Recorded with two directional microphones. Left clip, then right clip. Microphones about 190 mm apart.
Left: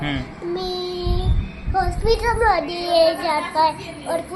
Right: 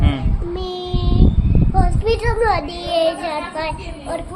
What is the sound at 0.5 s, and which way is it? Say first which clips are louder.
Child singing: left 1 dB; 25° right (ahead or behind).